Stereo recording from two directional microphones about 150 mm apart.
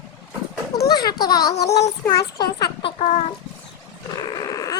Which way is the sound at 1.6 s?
90° left.